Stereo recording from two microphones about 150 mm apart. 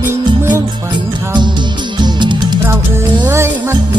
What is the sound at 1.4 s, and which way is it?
Music, 30° right (ahead or behind).